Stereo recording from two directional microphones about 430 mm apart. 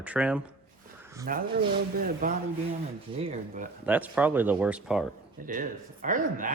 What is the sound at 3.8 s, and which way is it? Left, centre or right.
Speech, centre.